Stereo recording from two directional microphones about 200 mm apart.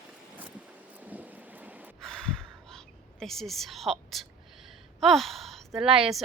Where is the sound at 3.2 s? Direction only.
Centre (ahead or behind).